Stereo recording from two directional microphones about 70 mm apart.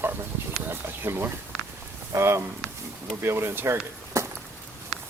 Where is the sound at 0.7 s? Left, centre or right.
Right.